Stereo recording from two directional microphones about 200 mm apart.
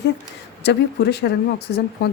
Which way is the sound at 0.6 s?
55° left (ahead or behind).